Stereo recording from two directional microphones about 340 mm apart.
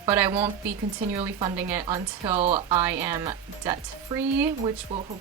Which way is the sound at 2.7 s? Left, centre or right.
Centre.